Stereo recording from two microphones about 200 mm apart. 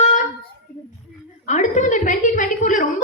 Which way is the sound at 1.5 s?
35° left (ahead or behind).